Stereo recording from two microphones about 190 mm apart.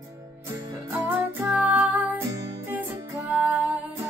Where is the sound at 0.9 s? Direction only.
10° right (ahead or behind).